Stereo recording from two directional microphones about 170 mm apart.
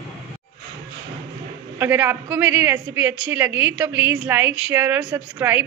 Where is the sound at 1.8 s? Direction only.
10° right (ahead or behind).